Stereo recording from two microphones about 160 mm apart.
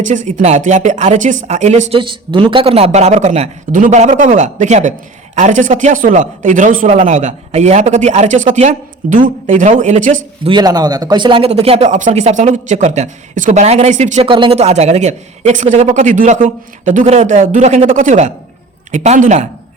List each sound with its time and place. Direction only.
0.0 s a man's voice: 50° right (ahead or behind)
2.0 s a man's voice: 30° right (ahead or behind); by 10.2 s 50° right (ahead or behind)
10.4 s a man's voice: 25° right (ahead or behind); by 14.3 s 45° right (ahead or behind)
14.3 s a man's voice: 30° right (ahead or behind)